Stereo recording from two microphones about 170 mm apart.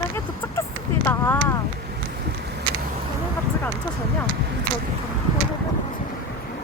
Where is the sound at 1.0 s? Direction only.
15° left (ahead or behind).